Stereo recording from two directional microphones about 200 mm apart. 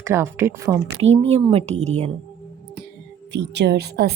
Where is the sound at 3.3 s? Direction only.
60° right (ahead or behind).